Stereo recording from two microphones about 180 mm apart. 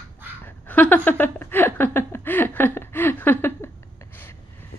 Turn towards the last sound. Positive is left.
turn(degrees=10)  # may be behind; listen again after turning